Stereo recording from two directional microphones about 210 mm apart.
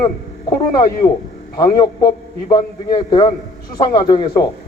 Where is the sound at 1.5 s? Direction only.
20° left (ahead or behind).